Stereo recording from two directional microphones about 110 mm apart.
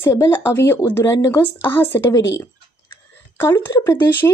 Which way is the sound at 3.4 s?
20° left (ahead or behind).